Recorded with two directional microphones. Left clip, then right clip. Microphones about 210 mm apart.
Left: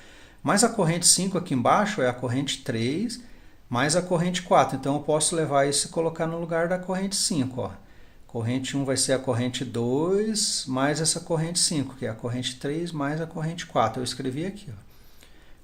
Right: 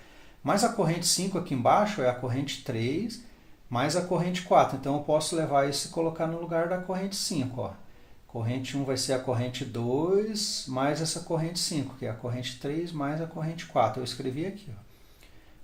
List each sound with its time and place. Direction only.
0.4 s speech: 40° left (ahead or behind)